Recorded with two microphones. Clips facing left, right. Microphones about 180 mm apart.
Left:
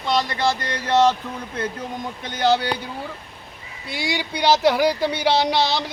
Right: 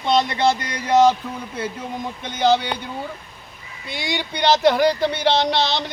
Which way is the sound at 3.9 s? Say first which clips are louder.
Left 1 dB; 5° left (ahead or behind).